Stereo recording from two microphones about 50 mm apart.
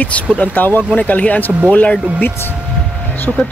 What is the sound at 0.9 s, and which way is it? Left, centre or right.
Speech, left.